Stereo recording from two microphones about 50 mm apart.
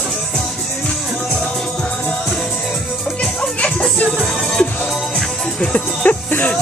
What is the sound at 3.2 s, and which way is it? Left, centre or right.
Music, left.